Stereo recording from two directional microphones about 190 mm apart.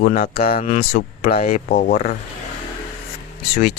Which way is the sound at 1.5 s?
45° left (ahead or behind).